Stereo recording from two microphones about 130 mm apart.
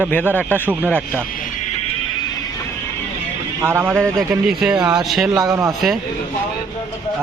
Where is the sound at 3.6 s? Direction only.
20° right (ahead or behind).